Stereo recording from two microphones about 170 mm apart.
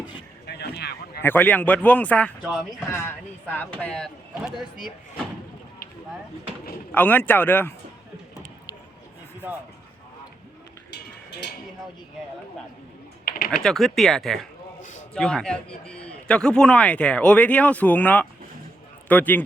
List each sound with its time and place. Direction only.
0.4 s a sound: 75° left (ahead or behind)
1.2 s a man's voice: 10° left (ahead or behind)
3.8 s speech: 5° left (ahead or behind)
6.9 s a man's voice: 10° left (ahead or behind)
10.9 s a sound: 85° left
13.2 s typing: 60° left (ahead or behind)
13.5 s speech: 5° left (ahead or behind)
14.8 s a sound: 45° left (ahead or behind)
15.1 s a man's voice: 5° left (ahead or behind)